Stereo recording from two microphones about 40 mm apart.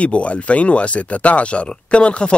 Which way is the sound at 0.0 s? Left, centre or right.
Left.